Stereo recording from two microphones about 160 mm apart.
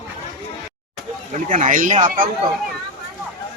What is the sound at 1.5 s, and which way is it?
Speech, 55° right (ahead or behind).